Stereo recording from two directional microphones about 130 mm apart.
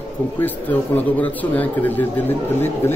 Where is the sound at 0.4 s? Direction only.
15° left (ahead or behind).